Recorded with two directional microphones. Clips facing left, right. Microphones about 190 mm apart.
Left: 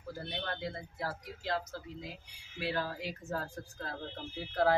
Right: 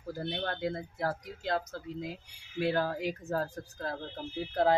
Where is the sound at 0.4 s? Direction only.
45° right (ahead or behind).